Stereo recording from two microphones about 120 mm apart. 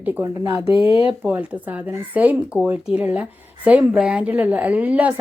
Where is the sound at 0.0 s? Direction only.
15° right (ahead or behind).